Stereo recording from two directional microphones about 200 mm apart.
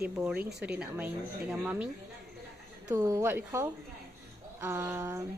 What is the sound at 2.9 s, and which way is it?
A woman's voice, 15° right (ahead or behind).